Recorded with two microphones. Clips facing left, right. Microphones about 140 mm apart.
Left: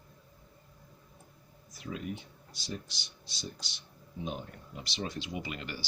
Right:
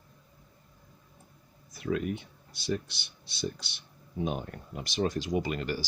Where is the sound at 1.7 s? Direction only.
60° right (ahead or behind).